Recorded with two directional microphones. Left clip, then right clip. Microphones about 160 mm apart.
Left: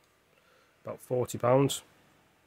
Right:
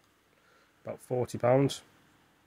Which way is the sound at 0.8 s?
15° left (ahead or behind).